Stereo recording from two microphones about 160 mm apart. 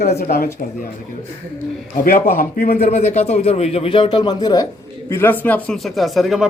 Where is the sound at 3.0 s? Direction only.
40° left (ahead or behind); by 4.7 s 25° left (ahead or behind).